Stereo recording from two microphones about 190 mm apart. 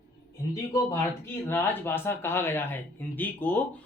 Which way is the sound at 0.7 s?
15° left (ahead or behind).